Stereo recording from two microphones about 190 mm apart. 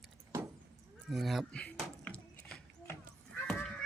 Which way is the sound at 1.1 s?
Centre (ahead or behind).